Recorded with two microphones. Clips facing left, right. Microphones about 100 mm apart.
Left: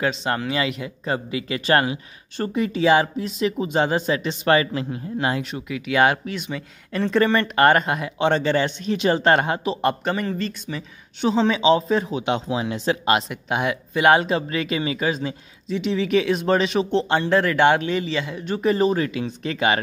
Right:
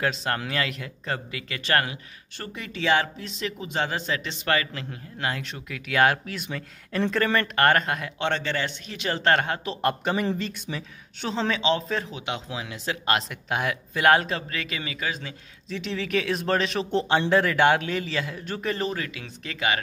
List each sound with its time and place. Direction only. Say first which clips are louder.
0.0 s speech: left 4 dB; 5° left (ahead or behind); by 5.4 s 20° left (ahead or behind)
5.4 s speech: left 8 dB; 5° left (ahead or behind)
9.8 s speech: left 3 dB; centre (ahead or behind)
10.7 s speech: left 3 dB; 10° left (ahead or behind); by 12.9 s 30° left (ahead or behind)
13.0 s speech: left 5 dB; 10° left (ahead or behind)
14.3 s speech: left 8 dB; 20° left (ahead or behind)
15.8 s speech: left 7 dB; 5° left (ahead or behind); by 19.8 s 30° left (ahead or behind)